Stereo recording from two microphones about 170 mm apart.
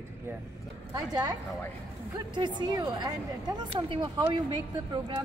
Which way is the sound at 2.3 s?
25° right (ahead or behind).